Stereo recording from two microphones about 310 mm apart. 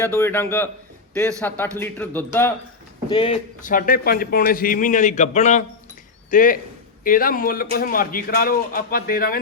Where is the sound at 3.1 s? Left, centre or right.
Centre.